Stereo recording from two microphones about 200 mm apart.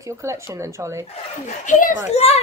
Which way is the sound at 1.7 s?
40° left (ahead or behind).